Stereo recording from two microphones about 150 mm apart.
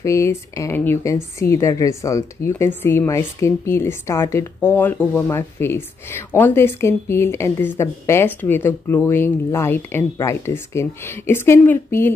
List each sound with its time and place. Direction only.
0.0 s speech: 20° left (ahead or behind)